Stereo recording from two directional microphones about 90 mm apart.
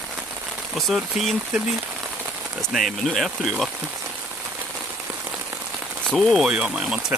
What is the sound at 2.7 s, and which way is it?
Speech, centre (ahead or behind).